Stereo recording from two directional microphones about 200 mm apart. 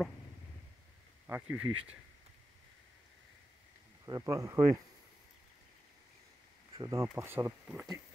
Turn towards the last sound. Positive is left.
turn(degrees=-10)  # may be behind; listen again after turning